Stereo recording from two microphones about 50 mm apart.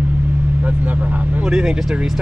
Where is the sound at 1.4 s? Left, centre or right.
Centre.